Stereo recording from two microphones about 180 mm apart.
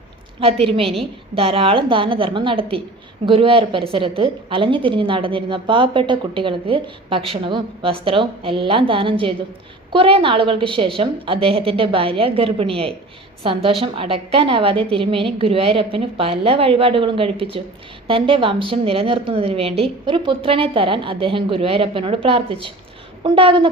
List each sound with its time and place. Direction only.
0.3 s a woman's voice: 30° right (ahead or behind)